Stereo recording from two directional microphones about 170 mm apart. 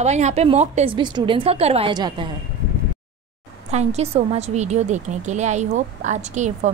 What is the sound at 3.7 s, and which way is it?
A woman's voice, 40° right (ahead or behind).